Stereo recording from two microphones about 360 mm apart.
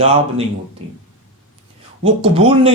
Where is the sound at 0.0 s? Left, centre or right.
Centre.